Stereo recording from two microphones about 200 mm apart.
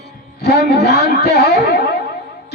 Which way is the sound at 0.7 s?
55° left (ahead or behind).